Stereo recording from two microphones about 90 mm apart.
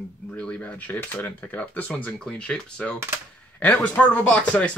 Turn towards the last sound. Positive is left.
turn(degrees=10)  # may be behind; listen again after turning